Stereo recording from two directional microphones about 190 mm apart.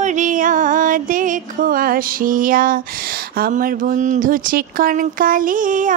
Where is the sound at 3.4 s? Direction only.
45° right (ahead or behind).